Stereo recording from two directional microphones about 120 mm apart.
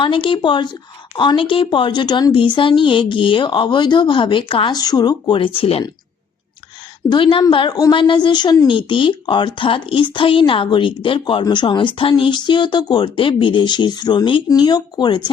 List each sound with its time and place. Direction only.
0.0 s speech: 45° left (ahead or behind)
4.8 s speech: 35° left (ahead or behind); by 5.8 s 50° left (ahead or behind)
7.1 s speech: 45° left (ahead or behind)